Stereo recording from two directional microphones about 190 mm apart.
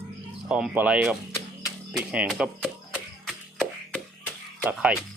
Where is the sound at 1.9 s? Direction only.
5° right (ahead or behind).